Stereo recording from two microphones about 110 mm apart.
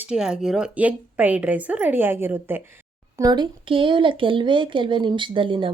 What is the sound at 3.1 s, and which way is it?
A woman's voice, 35° right (ahead or behind).